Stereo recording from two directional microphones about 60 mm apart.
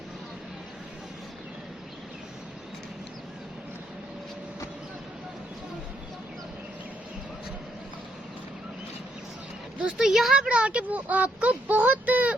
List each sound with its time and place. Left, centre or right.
9.8 s speech: centre
10.5 s speech: centre